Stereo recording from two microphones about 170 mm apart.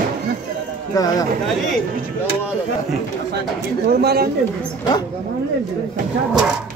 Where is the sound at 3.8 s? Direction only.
65° right (ahead or behind).